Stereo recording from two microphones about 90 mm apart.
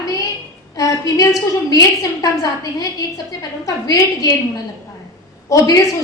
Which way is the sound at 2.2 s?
40° left (ahead or behind).